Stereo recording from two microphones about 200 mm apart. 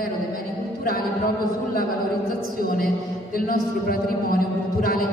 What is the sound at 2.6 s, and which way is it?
Speech, 45° left (ahead or behind).